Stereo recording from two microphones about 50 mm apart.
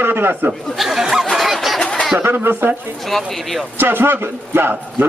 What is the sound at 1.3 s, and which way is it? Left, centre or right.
Fowl, centre.